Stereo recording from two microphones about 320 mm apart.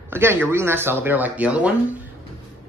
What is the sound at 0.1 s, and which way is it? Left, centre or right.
Speech, centre.